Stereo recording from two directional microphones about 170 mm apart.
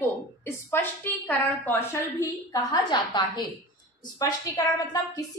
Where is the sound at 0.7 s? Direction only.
10° left (ahead or behind).